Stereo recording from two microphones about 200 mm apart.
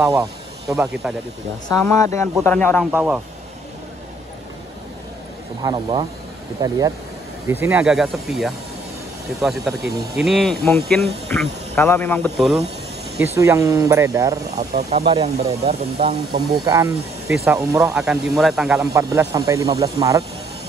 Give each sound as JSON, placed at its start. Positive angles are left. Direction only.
{"t": 0.1, "sound": "speech", "side_deg": -15}
{"t": 1.0, "sound": "speech", "side_deg": -5}
{"t": 1.7, "sound": "speech", "side_deg": 15}
{"t": 2.9, "sound": "speech", "side_deg": -5}
{"t": 5.6, "sound": "speech", "side_deg": -20}
{"t": 7.6, "sound": "speech", "side_deg": -5}
{"t": 13.2, "sound": "speech", "side_deg": -10}
{"t": 14.8, "sound": "speech", "side_deg": -35}
{"t": 16.6, "sound": "speech", "side_deg": -15}
{"t": 18.8, "sound": "speech", "side_deg": -15}